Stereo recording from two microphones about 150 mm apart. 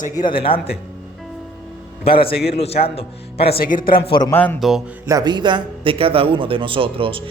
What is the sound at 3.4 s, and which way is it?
Speech, 85° left.